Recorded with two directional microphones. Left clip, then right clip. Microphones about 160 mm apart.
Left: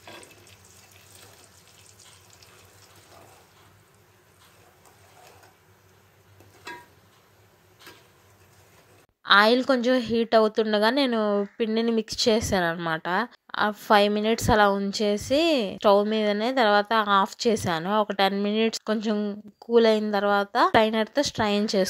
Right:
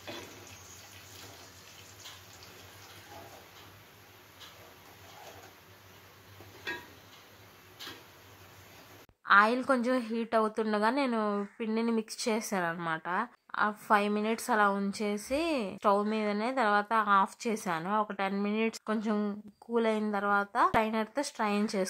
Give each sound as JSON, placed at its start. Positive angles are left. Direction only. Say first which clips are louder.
{"t": 9.2, "sound": "a woman's voice", "louder": "left 6 dB", "side_deg": 30}
{"t": 19.1, "sound": "speech", "louder": "left 5 dB", "side_deg": 15}
{"t": 19.7, "sound": "a woman's voice", "louder": "left 10 dB", "side_deg": 30}